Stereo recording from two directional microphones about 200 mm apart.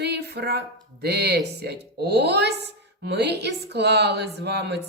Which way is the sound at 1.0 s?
55° right (ahead or behind).